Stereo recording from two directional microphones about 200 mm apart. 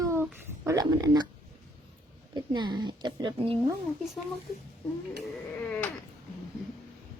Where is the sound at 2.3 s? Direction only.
20° right (ahead or behind).